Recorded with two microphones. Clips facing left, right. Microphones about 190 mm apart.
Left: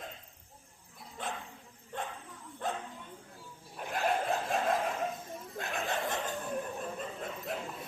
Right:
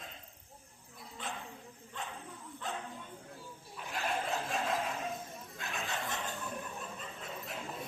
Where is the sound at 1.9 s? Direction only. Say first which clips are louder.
Left 5 dB; 50° left (ahead or behind).